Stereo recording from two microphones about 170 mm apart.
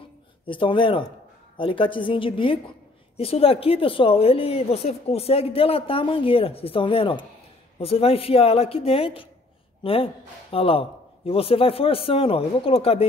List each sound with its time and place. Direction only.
0.5 s a woman's voice: 30° left (ahead or behind)